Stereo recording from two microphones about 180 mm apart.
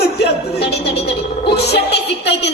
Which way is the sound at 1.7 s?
70° left (ahead or behind).